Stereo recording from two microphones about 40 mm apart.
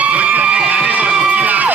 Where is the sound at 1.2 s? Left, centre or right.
Right.